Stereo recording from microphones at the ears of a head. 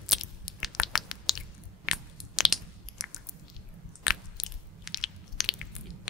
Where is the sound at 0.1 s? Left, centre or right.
Left.